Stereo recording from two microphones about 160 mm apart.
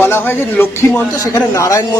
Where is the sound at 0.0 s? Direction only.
15° left (ahead or behind).